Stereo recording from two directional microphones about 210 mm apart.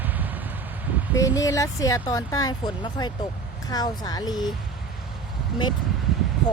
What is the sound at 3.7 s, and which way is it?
Speech, 20° left (ahead or behind).